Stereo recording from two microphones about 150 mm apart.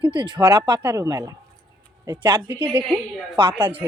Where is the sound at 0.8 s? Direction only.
20° right (ahead or behind).